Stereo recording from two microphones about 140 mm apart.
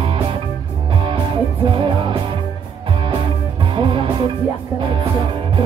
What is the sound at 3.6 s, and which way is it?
Music, 35° right (ahead or behind).